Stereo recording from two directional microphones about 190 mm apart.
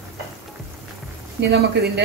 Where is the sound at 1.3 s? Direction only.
55° right (ahead or behind).